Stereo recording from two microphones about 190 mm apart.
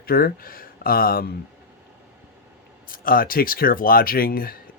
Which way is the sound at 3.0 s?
50° left (ahead or behind).